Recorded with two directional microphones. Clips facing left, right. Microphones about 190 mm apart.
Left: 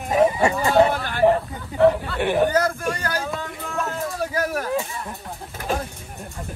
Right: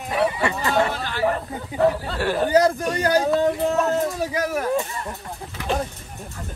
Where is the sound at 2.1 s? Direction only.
15° left (ahead or behind).